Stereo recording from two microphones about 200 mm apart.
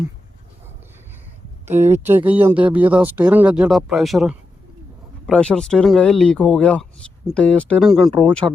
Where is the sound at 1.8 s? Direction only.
10° right (ahead or behind).